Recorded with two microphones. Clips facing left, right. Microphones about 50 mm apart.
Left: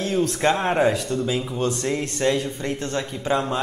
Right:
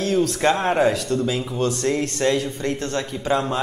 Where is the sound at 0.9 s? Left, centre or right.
Centre.